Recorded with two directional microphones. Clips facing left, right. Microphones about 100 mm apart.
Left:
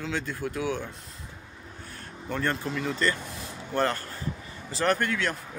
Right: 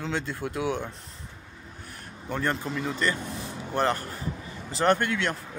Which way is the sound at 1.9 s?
15° right (ahead or behind).